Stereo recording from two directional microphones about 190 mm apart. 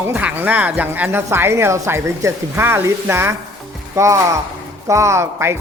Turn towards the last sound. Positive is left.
turn(degrees=-15)  # may be behind; listen again after turning